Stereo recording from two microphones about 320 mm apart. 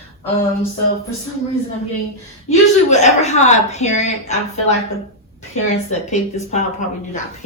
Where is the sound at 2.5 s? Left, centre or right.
Left.